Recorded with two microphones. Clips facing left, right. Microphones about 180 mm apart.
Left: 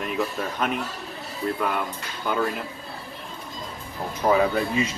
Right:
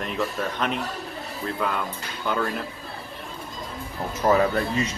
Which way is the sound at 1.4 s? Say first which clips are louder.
Left 5 dB; 15° left (ahead or behind).